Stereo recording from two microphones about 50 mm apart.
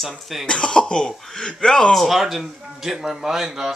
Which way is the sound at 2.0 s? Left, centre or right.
Centre.